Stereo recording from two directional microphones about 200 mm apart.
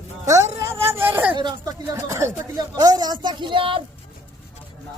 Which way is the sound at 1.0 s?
10° right (ahead or behind).